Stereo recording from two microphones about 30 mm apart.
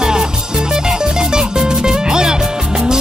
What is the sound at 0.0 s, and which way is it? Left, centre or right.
Music, right.